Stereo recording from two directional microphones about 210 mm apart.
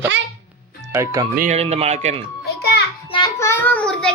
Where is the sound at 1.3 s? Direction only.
35° right (ahead or behind).